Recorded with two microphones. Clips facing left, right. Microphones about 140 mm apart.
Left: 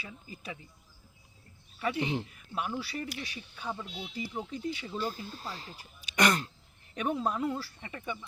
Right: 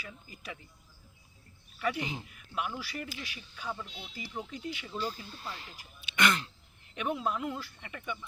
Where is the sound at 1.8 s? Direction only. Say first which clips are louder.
Even; 25° left (ahead or behind).